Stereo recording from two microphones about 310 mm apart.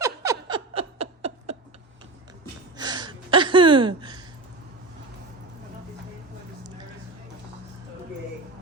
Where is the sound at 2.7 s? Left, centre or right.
Centre.